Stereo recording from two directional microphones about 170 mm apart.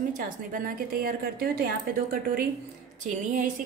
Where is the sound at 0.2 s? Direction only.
55° right (ahead or behind).